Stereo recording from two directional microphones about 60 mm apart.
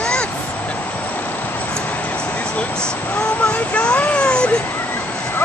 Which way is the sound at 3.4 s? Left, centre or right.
Left.